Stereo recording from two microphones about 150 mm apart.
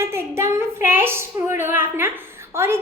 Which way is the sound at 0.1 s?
15° right (ahead or behind).